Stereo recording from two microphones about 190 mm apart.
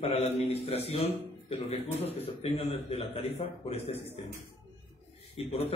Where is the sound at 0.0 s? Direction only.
35° left (ahead or behind).